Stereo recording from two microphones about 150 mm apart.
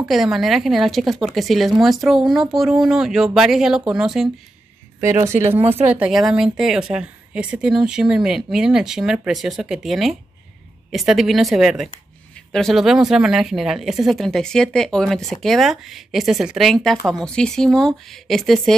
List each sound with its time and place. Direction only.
0.0 s speech: centre (ahead or behind)
5.2 s speech: 15° right (ahead or behind)
5.6 s speech: 40° right (ahead or behind)
5.9 s speech: 5° right (ahead or behind)